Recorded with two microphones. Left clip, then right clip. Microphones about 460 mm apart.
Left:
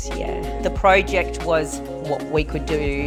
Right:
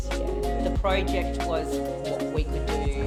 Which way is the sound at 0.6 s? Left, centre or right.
Left.